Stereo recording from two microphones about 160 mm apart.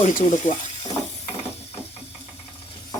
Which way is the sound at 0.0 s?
45° left (ahead or behind).